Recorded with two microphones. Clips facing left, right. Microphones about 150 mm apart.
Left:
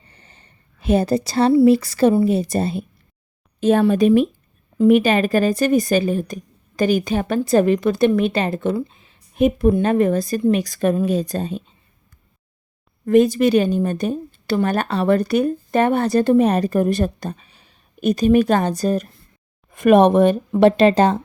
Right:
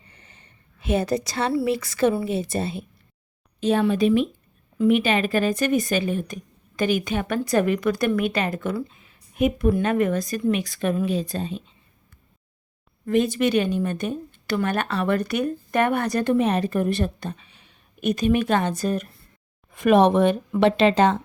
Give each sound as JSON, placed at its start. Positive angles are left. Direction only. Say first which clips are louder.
{"t": 0.1, "sound": "a sound", "louder": "left 2 dB", "side_deg": 30}
{"t": 1.6, "sound": "a woman's voice", "louder": "left 8 dB", "side_deg": 35}
{"t": 13.1, "sound": "a woman's voice", "louder": "left 7 dB", "side_deg": 40}
{"t": 19.7, "sound": "speech", "louder": "left 4 dB", "side_deg": 50}